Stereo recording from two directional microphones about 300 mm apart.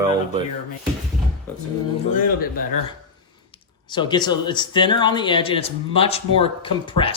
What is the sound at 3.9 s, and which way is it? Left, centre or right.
Speech, centre.